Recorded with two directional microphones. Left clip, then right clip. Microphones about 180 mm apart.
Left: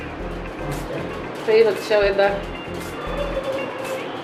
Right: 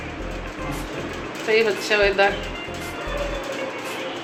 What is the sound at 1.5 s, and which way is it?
Speech, 5° right (ahead or behind).